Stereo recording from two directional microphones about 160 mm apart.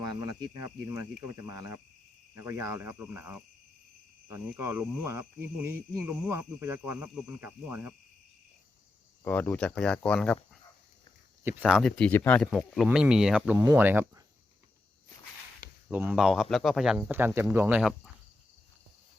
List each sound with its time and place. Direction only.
2.3 s speech: 15° right (ahead or behind)
9.2 s speech: 10° left (ahead or behind)
11.6 s speech: centre (ahead or behind)
13.6 s speech: 15° right (ahead or behind)
15.9 s speech: 10° right (ahead or behind)